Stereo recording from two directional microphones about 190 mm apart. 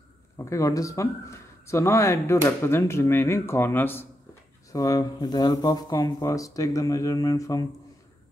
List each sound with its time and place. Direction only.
0.5 s speech: 15° left (ahead or behind)